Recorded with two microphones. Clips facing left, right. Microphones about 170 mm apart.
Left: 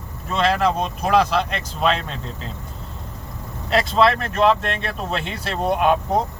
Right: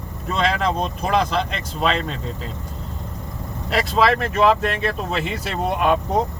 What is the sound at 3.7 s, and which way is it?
Speech, centre (ahead or behind).